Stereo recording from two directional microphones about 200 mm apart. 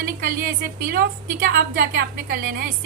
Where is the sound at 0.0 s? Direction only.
45° right (ahead or behind).